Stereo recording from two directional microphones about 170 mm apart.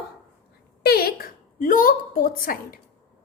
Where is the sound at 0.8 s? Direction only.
65° left (ahead or behind).